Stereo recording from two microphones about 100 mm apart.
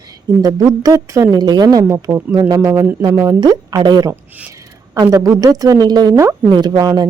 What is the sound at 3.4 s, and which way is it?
A woman's voice, 45° right (ahead or behind).